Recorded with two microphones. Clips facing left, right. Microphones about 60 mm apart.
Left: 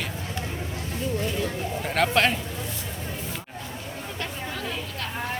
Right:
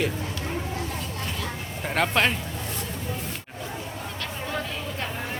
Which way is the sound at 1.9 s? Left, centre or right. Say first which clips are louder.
Left 1 dB; centre.